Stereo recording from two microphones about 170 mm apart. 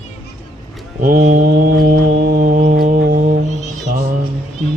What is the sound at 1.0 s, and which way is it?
Mantra, 55° right (ahead or behind).